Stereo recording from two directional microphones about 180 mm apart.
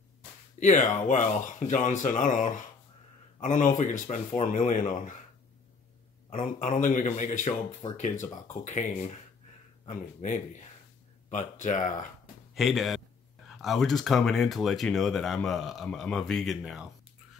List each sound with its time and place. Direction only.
0.6 s speech: 45° left (ahead or behind)
6.6 s speech: 45° left (ahead or behind)
12.5 s speech: centre (ahead or behind)